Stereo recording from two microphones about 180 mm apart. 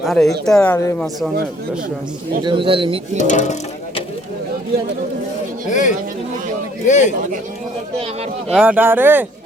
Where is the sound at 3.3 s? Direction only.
40° left (ahead or behind).